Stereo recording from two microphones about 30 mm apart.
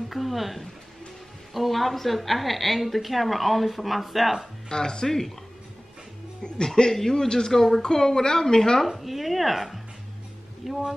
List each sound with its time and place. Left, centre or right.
0.1 s a woman's voice: centre
4.6 s speech: left
6.4 s speech: left
8.8 s a woman's voice: centre